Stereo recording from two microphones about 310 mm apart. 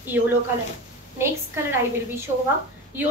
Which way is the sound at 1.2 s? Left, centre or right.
Centre.